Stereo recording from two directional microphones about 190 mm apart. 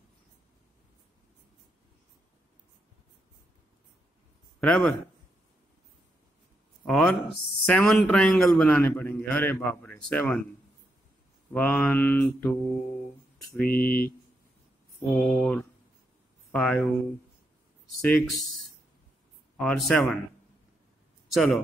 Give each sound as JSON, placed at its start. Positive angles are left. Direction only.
{"t": 4.6, "sound": "a man's voice", "side_deg": 5}
{"t": 6.8, "sound": "a man's voice", "side_deg": 5}
{"t": 11.5, "sound": "a man's voice", "side_deg": 10}
{"t": 13.6, "sound": "speech", "side_deg": 50}
{"t": 15.1, "sound": "speech", "side_deg": 0}
{"t": 18.0, "sound": "a man's voice", "side_deg": 5}
{"t": 19.5, "sound": "speech", "side_deg": 0}
{"t": 21.3, "sound": "speech", "side_deg": 5}